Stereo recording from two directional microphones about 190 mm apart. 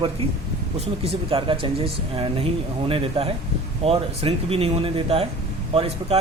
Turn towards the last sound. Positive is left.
turn(degrees=-30)  # may be behind; listen again after turning